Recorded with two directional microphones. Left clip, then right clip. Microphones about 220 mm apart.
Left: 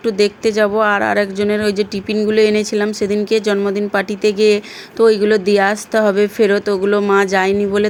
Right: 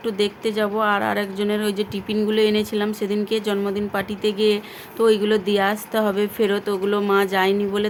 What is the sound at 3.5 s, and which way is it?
Speech, 20° left (ahead or behind).